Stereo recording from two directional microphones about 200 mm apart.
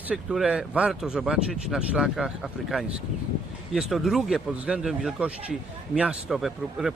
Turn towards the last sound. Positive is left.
turn(degrees=0)  # may be behind; listen again after turning